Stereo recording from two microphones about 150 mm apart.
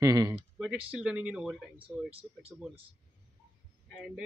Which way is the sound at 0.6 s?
5° right (ahead or behind).